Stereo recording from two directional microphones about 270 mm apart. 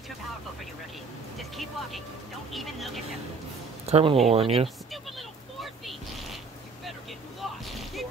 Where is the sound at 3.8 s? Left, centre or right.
Right.